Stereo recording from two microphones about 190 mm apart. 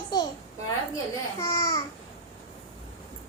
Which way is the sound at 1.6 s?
15° left (ahead or behind).